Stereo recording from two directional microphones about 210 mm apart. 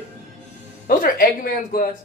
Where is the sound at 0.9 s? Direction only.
45° left (ahead or behind).